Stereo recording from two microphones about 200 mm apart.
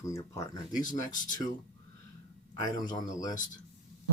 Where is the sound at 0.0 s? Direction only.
15° left (ahead or behind).